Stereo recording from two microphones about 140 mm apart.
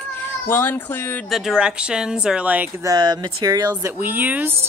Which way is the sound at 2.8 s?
30° right (ahead or behind).